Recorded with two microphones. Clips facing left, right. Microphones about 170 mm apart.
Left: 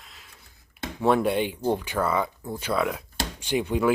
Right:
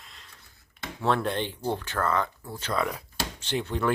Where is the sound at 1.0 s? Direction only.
10° left (ahead or behind).